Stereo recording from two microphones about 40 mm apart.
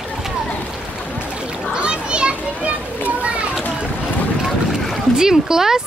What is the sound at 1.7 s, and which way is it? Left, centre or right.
Children playing, right.